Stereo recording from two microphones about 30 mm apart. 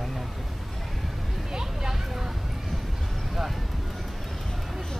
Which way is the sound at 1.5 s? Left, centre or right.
Right.